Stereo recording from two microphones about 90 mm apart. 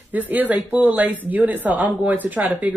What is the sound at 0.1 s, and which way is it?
Speech, 20° right (ahead or behind).